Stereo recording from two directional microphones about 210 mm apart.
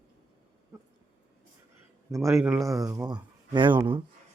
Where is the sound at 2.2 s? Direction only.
Centre (ahead or behind); by 4.0 s 25° right (ahead or behind).